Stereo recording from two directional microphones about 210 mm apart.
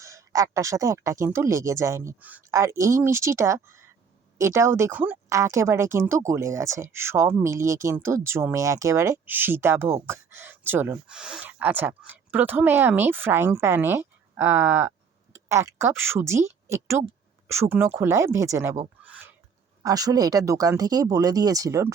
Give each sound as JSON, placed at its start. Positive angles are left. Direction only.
{"t": 0.0, "sound": "speech", "side_deg": -15}